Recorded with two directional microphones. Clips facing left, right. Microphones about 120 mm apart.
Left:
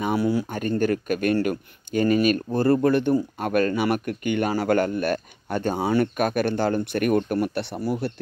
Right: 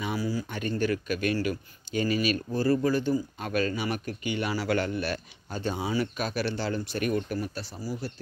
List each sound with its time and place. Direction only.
0.0 s speech: 60° left (ahead or behind)
0.5 s speech: 45° left (ahead or behind); by 8.1 s 65° left (ahead or behind)